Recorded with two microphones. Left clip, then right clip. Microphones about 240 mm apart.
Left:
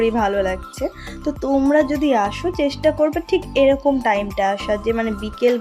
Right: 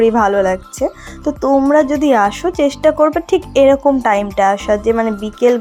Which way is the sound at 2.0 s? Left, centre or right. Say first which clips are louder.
Right 6 dB; centre.